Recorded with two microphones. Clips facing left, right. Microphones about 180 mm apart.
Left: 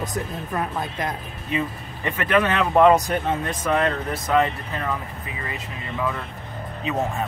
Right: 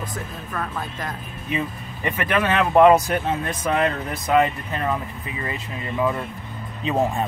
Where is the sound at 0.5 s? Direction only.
20° left (ahead or behind).